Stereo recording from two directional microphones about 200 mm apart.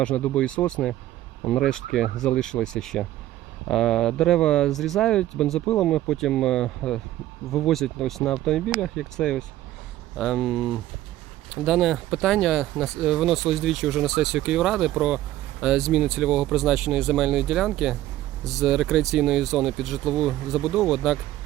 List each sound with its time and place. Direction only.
0.0 s speech: 5° left (ahead or behind)